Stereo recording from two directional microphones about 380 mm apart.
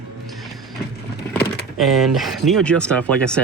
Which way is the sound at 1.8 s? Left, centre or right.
Centre.